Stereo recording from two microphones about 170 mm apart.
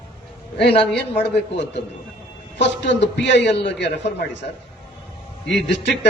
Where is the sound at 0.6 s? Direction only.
75° left (ahead or behind).